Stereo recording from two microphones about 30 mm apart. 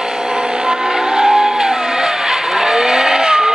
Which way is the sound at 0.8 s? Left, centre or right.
Centre.